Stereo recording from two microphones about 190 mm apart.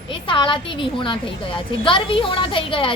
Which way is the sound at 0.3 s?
25° left (ahead or behind).